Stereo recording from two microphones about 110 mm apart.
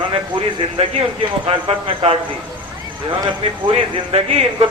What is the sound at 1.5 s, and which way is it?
Speech, 55° right (ahead or behind).